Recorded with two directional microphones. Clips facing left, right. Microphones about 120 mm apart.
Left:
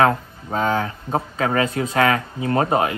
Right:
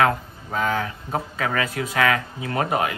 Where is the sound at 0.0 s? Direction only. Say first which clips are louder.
Left 3 dB; 35° left (ahead or behind).